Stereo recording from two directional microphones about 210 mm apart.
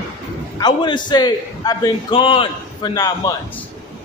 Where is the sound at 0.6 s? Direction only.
20° left (ahead or behind).